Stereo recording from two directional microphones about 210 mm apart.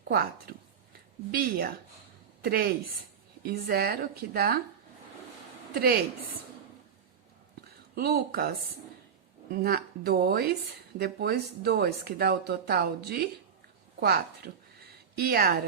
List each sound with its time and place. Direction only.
0.1 s speech: 45° right (ahead or behind)
7.9 s speech: 50° right (ahead or behind)